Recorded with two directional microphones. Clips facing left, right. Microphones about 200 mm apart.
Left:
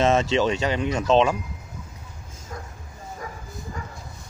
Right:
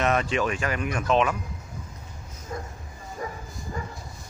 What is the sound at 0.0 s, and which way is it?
Speech, 25° left (ahead or behind).